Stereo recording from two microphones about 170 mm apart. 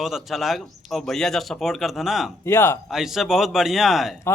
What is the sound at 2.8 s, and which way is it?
A man's voice, centre (ahead or behind).